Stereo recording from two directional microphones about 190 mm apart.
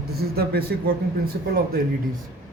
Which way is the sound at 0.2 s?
55° right (ahead or behind).